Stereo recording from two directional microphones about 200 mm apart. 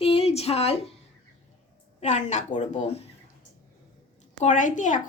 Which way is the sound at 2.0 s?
35° left (ahead or behind).